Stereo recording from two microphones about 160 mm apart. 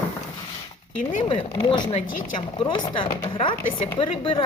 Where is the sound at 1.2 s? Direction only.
30° left (ahead or behind).